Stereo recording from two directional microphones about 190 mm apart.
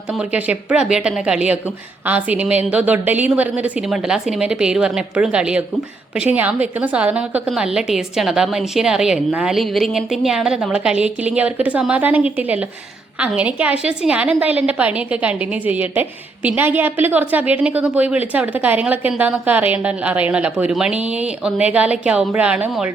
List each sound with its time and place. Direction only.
0.1 s a woman's voice: 5° right (ahead or behind)